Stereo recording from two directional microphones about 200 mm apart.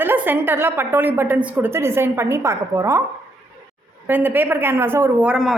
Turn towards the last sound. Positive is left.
turn(degrees=-5)  # may be behind; listen again after turning